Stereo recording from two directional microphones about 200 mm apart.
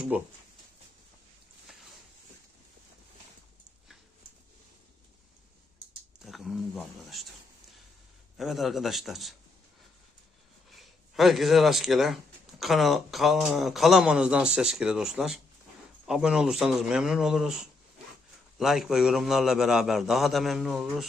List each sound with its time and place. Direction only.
0.1 s speech: 5° right (ahead or behind)
6.2 s speech: centre (ahead or behind)
8.4 s speech: centre (ahead or behind)
10.7 s speech: centre (ahead or behind)